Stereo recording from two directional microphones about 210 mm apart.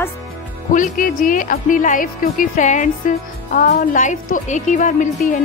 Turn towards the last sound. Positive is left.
turn(degrees=35)  # may be behind; listen again after turning